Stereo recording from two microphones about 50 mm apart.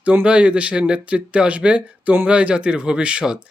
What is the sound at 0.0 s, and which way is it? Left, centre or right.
Speech, right.